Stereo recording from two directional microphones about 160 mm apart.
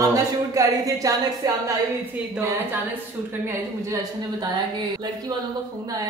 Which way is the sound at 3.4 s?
20° right (ahead or behind).